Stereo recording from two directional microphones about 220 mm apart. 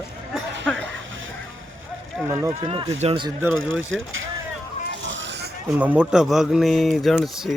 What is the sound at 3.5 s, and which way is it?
Speech, 65° right (ahead or behind).